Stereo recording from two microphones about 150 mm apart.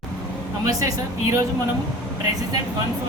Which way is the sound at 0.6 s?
20° right (ahead or behind).